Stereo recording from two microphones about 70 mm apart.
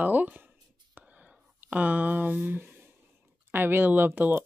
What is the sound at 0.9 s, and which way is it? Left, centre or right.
Whispering, right.